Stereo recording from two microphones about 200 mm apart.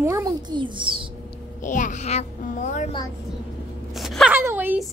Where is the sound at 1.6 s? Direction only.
40° left (ahead or behind).